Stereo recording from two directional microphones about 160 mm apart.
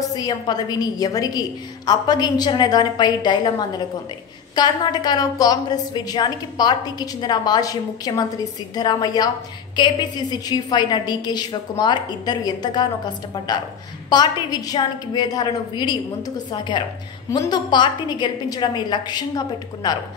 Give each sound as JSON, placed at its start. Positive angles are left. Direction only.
{"t": 0.1, "sound": "a woman's voice", "side_deg": 25}